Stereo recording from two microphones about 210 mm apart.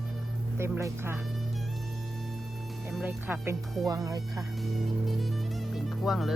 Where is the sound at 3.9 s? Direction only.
15° right (ahead or behind).